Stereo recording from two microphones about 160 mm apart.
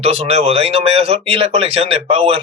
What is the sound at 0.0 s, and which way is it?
Speech, 40° right (ahead or behind).